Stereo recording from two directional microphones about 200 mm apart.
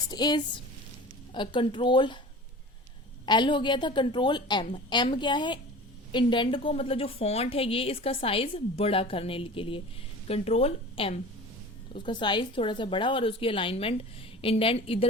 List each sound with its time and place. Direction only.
0.1 s a woman's voice: 20° left (ahead or behind)
3.2 s a woman's voice: 25° left (ahead or behind)